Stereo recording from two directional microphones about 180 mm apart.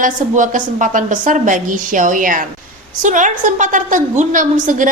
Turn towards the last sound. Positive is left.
turn(degrees=-45)  # may be behind; listen again after turning